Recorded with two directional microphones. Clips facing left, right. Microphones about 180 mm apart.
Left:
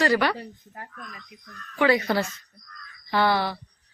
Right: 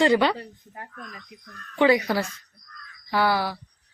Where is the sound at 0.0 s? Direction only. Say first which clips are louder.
Right 3 dB; 20° right (ahead or behind).